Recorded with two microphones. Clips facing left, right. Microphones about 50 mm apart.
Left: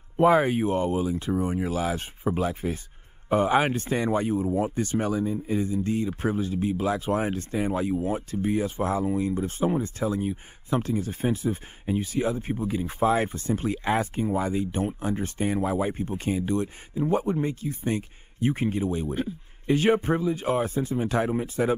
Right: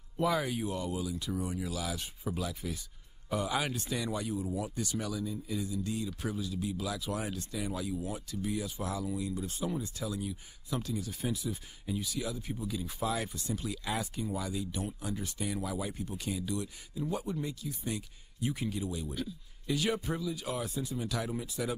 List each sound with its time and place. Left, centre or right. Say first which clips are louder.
0.2 s speech: left 11 dB; left